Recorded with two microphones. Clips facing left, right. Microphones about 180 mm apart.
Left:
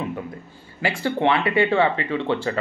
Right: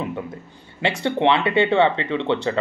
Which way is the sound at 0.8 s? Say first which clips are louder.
Right 2 dB; 25° right (ahead or behind).